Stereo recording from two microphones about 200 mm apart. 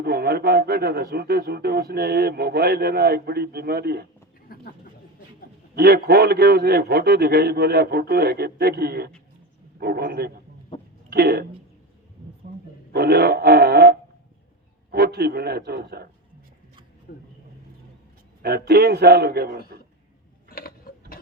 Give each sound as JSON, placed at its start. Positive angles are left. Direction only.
{"t": 0.0, "sound": "speech", "side_deg": -50}
{"t": 4.5, "sound": "a sound", "side_deg": 45}
{"t": 5.7, "sound": "speech", "side_deg": -50}
{"t": 12.9, "sound": "speech", "side_deg": -50}
{"t": 17.1, "sound": "speech", "side_deg": 50}
{"t": 18.4, "sound": "speech", "side_deg": -50}
{"t": 20.5, "sound": "mechanisms", "side_deg": 50}